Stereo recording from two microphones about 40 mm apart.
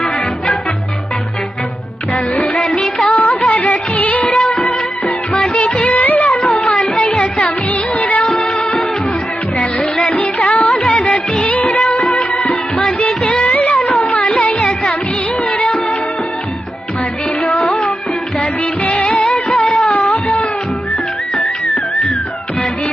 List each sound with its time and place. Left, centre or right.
2.7 s music of bollywood: left
4.4 s music of bollywood: centre
5.5 s music of bollywood: left
5.9 s music of bollywood: left
6.6 s music: left
7.3 s music of bollywood: left
10.0 s music of bollywood: left
11.4 s music of bollywood: left
12.4 s music: left
13.1 s music of bollywood: left
13.5 s music: left
15.4 s music of bollywood: left
18.9 s music of bollywood: left